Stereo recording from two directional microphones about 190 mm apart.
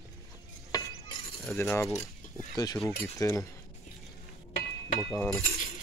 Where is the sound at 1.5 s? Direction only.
15° left (ahead or behind).